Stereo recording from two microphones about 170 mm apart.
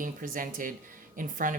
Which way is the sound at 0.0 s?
55° right (ahead or behind).